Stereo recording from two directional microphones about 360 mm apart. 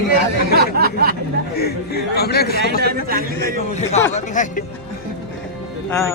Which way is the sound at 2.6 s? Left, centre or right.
Right.